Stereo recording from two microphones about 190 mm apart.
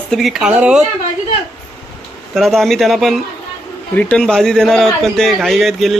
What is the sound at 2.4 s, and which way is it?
Speech, centre (ahead or behind).